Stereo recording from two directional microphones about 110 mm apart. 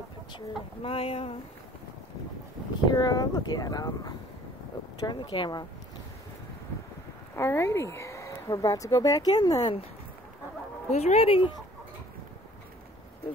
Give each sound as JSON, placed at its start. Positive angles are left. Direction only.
{"t": 0.8, "sound": "speech", "side_deg": 60}
{"t": 2.9, "sound": "speech", "side_deg": 40}
{"t": 5.0, "sound": "speech", "side_deg": 45}
{"t": 7.3, "sound": "speech", "side_deg": 25}
{"t": 10.9, "sound": "speech", "side_deg": 90}